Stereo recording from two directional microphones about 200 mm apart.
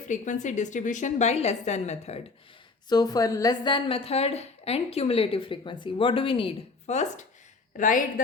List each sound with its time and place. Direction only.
0.1 s a woman's voice: 35° left (ahead or behind)
2.9 s a woman's voice: 20° left (ahead or behind); by 8.0 s 40° left (ahead or behind)